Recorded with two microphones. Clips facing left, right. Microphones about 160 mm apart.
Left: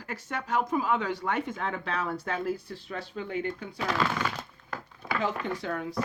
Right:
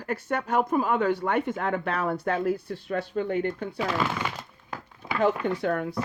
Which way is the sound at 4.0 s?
15° right (ahead or behind).